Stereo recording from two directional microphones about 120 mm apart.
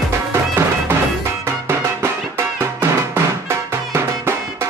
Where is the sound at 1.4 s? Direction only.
20° right (ahead or behind).